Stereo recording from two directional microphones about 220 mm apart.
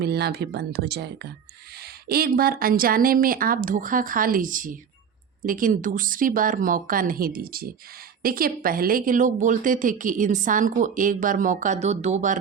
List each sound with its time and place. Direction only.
0.0 s a woman's voice: 50° right (ahead or behind)